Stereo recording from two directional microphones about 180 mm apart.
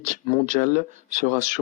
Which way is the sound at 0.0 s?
45° right (ahead or behind).